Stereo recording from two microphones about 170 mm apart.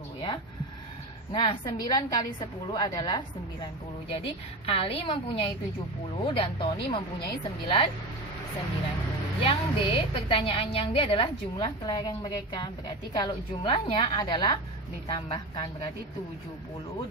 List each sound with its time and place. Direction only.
1.3 s a woman's voice: 30° left (ahead or behind)
9.4 s a woman's voice: 30° left (ahead or behind)